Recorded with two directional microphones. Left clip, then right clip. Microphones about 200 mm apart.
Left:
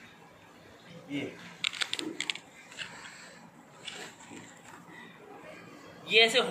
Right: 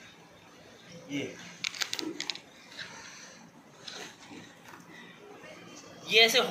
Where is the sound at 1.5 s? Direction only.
35° right (ahead or behind).